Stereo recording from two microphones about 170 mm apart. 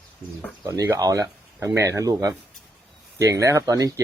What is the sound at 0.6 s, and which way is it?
Speech, 20° right (ahead or behind).